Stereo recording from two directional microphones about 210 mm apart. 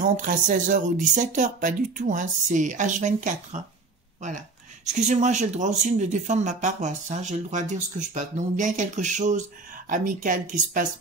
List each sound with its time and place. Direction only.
0.0 s speech: 40° right (ahead or behind)